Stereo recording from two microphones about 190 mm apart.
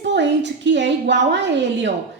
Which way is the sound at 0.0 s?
65° right (ahead or behind).